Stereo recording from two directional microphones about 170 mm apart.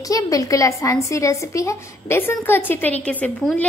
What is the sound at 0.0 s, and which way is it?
A woman's voice, 20° left (ahead or behind).